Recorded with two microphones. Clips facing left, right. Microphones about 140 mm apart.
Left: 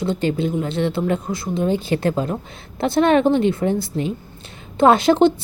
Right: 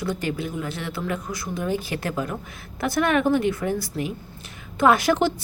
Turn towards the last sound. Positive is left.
turn(degrees=25)  # may be behind; listen again after turning